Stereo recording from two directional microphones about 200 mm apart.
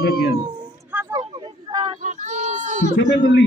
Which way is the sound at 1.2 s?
25° right (ahead or behind).